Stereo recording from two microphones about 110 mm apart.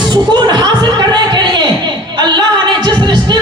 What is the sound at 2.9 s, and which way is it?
Music, 40° right (ahead or behind).